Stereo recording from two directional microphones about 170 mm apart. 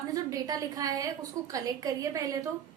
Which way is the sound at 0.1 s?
20° right (ahead or behind).